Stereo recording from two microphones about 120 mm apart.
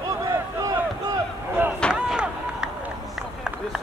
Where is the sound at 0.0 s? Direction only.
30° right (ahead or behind).